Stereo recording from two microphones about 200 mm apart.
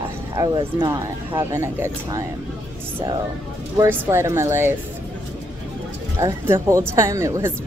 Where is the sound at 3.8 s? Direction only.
15° right (ahead or behind).